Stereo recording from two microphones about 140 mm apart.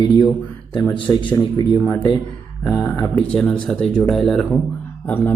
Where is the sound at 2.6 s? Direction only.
5° left (ahead or behind).